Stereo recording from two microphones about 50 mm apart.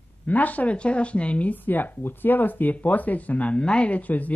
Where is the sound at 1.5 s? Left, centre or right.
Left.